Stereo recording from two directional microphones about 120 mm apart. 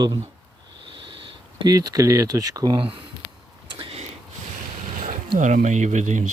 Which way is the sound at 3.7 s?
40° right (ahead or behind).